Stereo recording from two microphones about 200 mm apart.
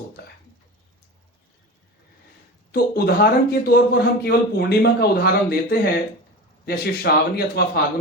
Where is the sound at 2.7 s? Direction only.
50° left (ahead or behind).